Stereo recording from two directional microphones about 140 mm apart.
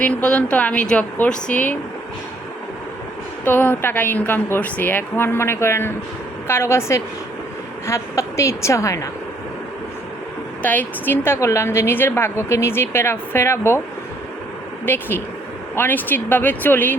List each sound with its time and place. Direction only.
0.0 s a woman's voice: 10° left (ahead or behind)
3.4 s a woman's voice: 15° left (ahead or behind)
10.6 s a woman's voice: 10° left (ahead or behind)
14.8 s a woman's voice: 15° left (ahead or behind)